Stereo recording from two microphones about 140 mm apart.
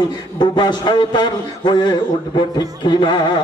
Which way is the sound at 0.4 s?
30° left (ahead or behind).